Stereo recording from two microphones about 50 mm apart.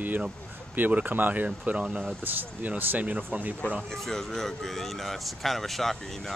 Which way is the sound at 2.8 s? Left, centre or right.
Right.